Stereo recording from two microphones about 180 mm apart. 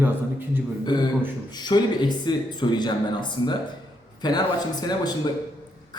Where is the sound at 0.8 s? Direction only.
25° left (ahead or behind).